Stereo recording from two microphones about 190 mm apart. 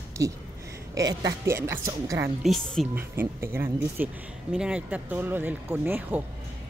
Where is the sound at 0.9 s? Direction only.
20° right (ahead or behind).